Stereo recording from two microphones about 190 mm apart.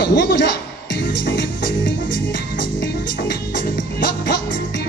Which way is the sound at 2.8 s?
70° left (ahead or behind).